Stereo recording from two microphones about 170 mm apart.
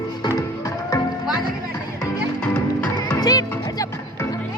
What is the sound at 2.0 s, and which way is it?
Music, 5° left (ahead or behind).